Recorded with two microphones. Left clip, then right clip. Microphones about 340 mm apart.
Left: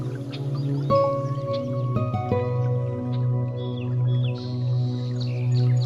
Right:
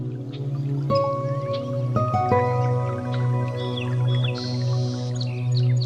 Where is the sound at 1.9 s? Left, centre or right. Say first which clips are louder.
Right 9 dB; centre.